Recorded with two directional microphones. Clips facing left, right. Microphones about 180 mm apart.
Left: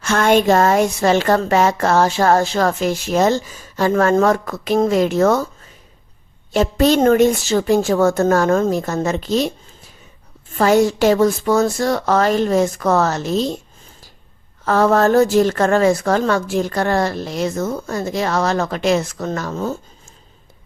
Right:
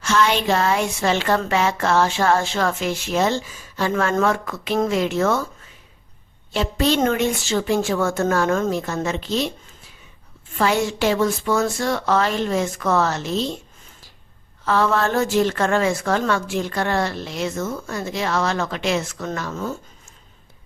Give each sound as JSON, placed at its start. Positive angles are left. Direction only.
{"t": 0.0, "sound": "a woman's voice", "side_deg": 50}
{"t": 6.5, "sound": "a woman's voice", "side_deg": 45}
{"t": 10.6, "sound": "a woman's voice", "side_deg": 40}
{"t": 14.6, "sound": "a woman's voice", "side_deg": 45}